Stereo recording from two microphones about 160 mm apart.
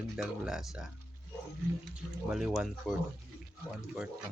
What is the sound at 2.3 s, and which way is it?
Speech, 5° right (ahead or behind).